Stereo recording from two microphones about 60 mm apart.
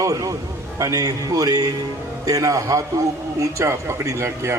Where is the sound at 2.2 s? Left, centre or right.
Right.